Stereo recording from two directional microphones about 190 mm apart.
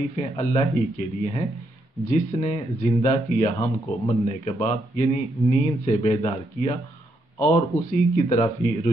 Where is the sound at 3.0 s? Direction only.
40° left (ahead or behind).